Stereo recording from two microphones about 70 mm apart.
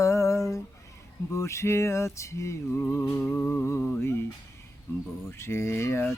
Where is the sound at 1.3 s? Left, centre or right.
Left.